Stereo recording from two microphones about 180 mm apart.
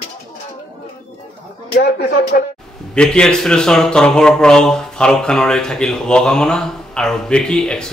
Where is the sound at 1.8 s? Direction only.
60° left (ahead or behind).